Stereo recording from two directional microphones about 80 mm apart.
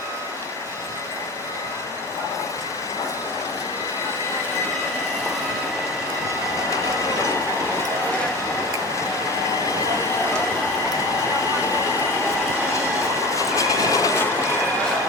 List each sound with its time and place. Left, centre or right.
13.3 s train: left